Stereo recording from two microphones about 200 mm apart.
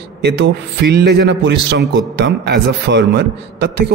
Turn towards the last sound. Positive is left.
turn(degrees=-60)  # may be behind; listen again after turning